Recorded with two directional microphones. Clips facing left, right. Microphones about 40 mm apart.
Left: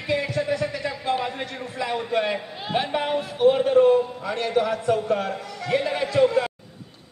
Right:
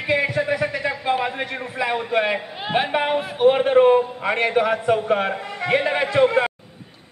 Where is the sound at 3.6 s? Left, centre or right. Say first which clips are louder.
Right 3 dB; right.